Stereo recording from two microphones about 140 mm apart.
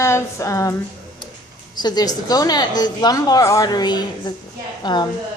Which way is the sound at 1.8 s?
30° left (ahead or behind).